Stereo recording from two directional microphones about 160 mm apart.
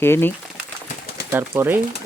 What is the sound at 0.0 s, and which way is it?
Speech, 15° left (ahead or behind).